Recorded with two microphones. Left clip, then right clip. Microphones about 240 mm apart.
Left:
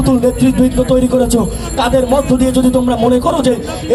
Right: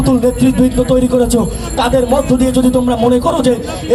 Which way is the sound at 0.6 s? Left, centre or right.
Right.